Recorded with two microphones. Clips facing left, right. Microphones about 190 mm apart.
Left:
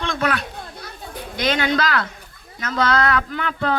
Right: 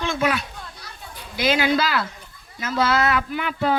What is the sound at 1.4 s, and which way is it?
A man's voice, 5° right (ahead or behind).